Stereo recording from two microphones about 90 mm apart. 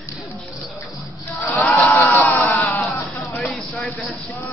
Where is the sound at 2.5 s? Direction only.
20° left (ahead or behind).